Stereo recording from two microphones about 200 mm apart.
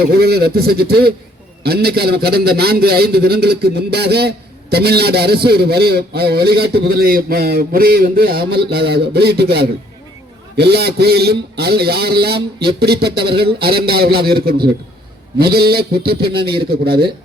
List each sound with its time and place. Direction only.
0.1 s a man's voice: 50° right (ahead or behind)
16.4 s a man's voice: 25° right (ahead or behind)
16.6 s a man's voice: 50° right (ahead or behind)